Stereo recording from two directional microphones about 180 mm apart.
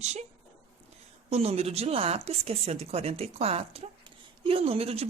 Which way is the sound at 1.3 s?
35° right (ahead or behind).